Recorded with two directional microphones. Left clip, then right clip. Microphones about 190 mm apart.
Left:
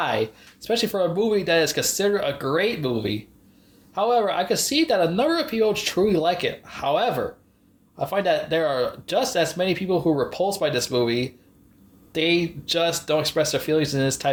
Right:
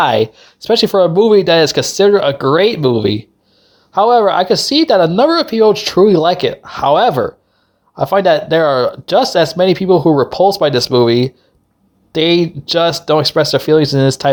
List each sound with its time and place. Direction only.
0.0 s speech: 45° right (ahead or behind)